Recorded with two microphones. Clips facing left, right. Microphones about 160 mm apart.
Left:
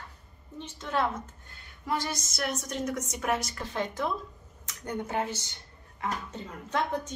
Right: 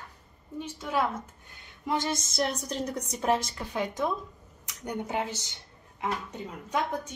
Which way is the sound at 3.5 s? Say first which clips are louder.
Right 1 dB; 10° right (ahead or behind).